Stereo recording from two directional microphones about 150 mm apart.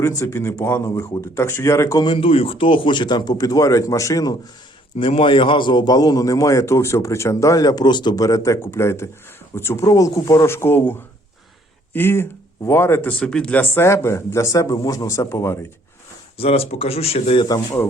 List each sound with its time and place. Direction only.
0.0 s a man's voice: 20° left (ahead or behind)
2.0 s a man's voice: 35° left (ahead or behind); by 10.9 s 15° left (ahead or behind)
11.9 s speech: 15° left (ahead or behind)
16.4 s speech: 40° left (ahead or behind)